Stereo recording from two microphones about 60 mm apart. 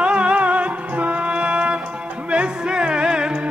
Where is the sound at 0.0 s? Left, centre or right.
Centre.